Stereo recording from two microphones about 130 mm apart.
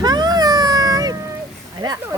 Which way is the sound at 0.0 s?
30° right (ahead or behind).